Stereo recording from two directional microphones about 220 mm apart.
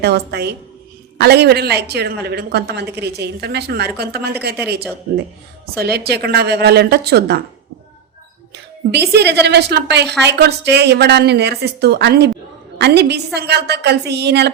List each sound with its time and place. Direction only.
0.0 s a woman's voice: 50° right (ahead or behind)
5.7 s a woman's voice: 45° right (ahead or behind)
8.9 s a woman's voice: 50° right (ahead or behind)